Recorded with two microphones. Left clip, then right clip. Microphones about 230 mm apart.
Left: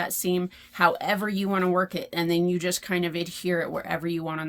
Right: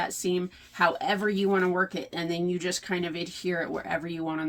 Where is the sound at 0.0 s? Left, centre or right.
Left.